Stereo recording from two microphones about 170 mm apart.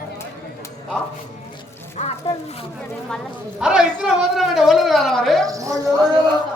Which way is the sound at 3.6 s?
5° right (ahead or behind).